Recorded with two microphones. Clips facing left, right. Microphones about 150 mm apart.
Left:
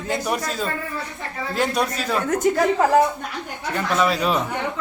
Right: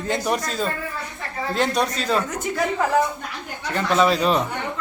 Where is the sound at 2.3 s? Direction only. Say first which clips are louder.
Left 6 dB; 40° left (ahead or behind).